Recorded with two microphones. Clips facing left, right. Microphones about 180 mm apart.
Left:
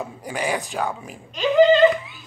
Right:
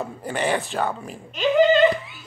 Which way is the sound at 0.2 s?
10° left (ahead or behind).